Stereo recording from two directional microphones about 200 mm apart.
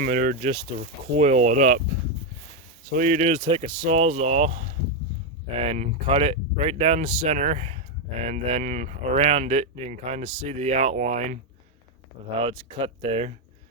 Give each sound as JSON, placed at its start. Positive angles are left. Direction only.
{"t": 0.0, "sound": "speech", "side_deg": -45}
{"t": 2.9, "sound": "speech", "side_deg": -40}
{"t": 12.4, "sound": "speech", "side_deg": -25}